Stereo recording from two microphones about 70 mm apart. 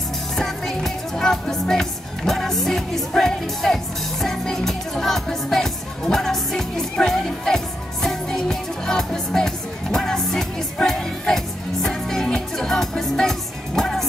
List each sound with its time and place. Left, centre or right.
0.4 s music: centre